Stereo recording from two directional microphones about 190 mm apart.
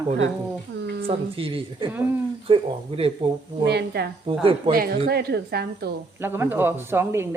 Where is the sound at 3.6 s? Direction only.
60° right (ahead or behind).